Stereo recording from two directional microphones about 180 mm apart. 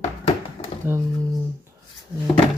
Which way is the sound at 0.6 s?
40° left (ahead or behind).